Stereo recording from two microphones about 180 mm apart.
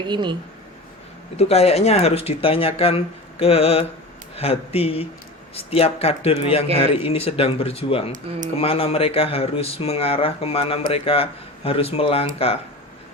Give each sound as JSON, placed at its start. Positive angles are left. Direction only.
{"t": 0.0, "sound": "speech", "side_deg": -25}
{"t": 1.4, "sound": "speech", "side_deg": 35}